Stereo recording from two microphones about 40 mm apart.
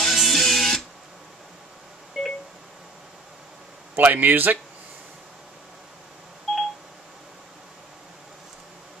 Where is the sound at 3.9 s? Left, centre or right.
Right.